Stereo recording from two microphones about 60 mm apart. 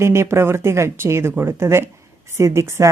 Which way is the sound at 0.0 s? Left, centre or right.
Right.